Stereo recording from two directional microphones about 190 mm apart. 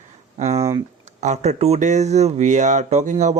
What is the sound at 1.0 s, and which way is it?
Speech, 35° right (ahead or behind).